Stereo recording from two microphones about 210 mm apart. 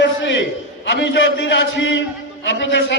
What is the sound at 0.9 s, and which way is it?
A man's voice, 55° left (ahead or behind).